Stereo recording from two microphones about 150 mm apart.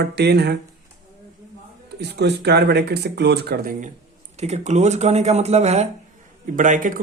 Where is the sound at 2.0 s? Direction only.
90° right.